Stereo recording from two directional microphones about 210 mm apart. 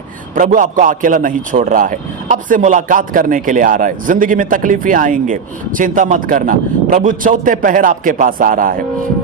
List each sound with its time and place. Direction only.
0.3 s a man's voice: 40° right (ahead or behind)